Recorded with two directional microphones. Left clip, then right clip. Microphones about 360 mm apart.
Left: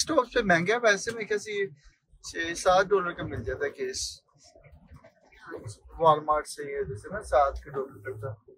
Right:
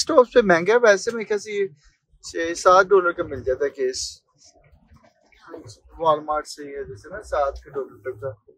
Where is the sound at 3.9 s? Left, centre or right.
Right.